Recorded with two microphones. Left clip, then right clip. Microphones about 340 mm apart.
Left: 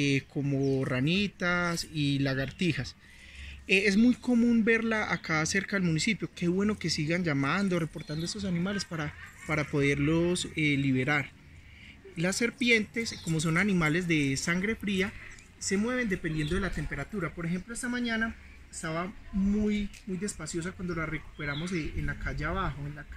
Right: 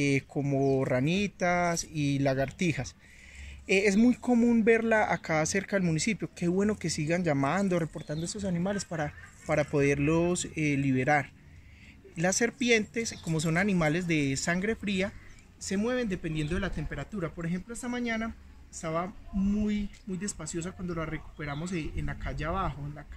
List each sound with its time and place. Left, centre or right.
0.0 s speech: centre
20.6 s speech: centre